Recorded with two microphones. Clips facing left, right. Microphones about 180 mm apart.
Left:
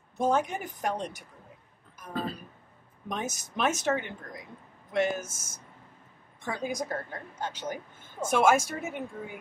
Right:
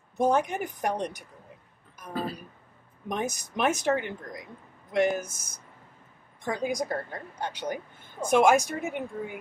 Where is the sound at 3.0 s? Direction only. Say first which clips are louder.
Right 4 dB; 15° right (ahead or behind).